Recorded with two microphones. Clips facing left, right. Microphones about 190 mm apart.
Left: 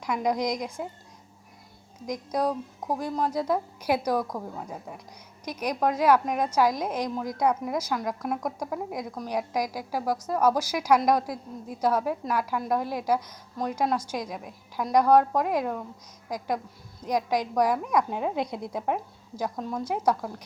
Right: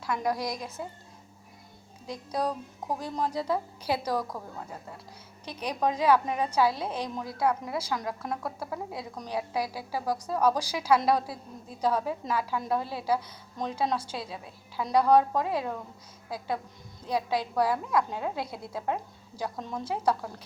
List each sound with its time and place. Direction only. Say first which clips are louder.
0.0 s a woman's voice: left 3 dB; 15° left (ahead or behind)
2.0 s a woman's voice: left 4 dB; 15° left (ahead or behind)
17.1 s a woman's voice: left 3 dB; 15° left (ahead or behind)